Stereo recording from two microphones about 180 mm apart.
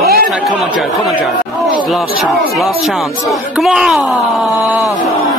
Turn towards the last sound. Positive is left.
turn(degrees=0)  # may be behind; listen again after turning